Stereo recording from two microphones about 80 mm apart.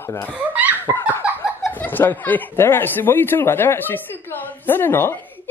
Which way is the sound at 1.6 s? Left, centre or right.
Left.